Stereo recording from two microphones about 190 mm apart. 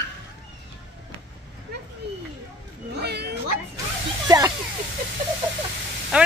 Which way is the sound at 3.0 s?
60° right (ahead or behind).